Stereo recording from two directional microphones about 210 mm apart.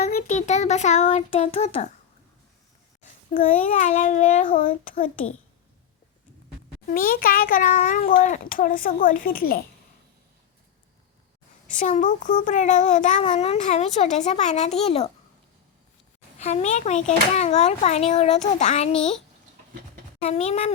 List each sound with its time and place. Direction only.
0.1 s a child's voice: 40° left (ahead or behind)
3.0 s a child's voice: 35° left (ahead or behind)
6.9 s a child's voice: 45° left (ahead or behind)
11.8 s a child's voice: 35° left (ahead or behind)
16.4 s a child's voice: 30° left (ahead or behind)
20.2 s a child's voice: 30° left (ahead or behind)